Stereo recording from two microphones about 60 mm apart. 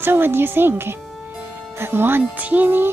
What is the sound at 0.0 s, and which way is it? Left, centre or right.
A woman's voice, right.